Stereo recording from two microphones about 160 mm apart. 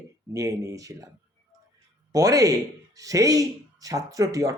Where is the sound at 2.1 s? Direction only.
20° right (ahead or behind).